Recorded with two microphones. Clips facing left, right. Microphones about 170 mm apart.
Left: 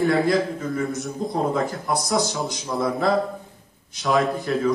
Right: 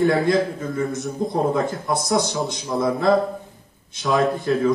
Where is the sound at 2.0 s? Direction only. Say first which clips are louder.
Right 4 dB; 20° right (ahead or behind).